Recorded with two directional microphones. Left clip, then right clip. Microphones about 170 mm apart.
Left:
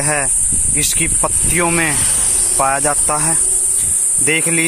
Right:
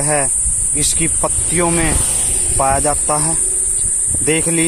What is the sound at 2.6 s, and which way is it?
Speech, 10° left (ahead or behind).